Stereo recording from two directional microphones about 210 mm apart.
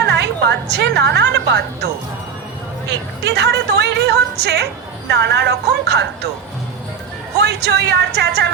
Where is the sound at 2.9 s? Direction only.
55° right (ahead or behind).